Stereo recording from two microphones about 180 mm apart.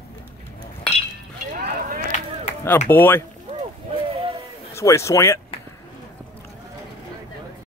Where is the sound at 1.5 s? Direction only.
55° right (ahead or behind).